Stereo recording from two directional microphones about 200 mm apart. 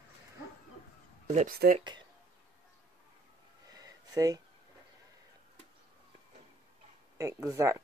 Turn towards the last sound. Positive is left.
turn(degrees=-15)  # may be behind; listen again after turning